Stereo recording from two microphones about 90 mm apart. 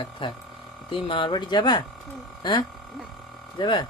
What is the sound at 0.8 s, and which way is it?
Speech, 80° left.